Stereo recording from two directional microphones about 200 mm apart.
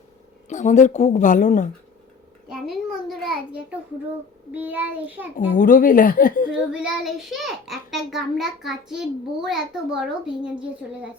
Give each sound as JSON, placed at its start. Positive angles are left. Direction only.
{"t": 0.4, "sound": "a woman's voice", "side_deg": 35}
{"t": 2.5, "sound": "a child's voice", "side_deg": 0}
{"t": 4.5, "sound": "child singing", "side_deg": -10}
{"t": 5.5, "sound": "speech", "side_deg": 45}
{"t": 6.7, "sound": "a child's voice", "side_deg": -5}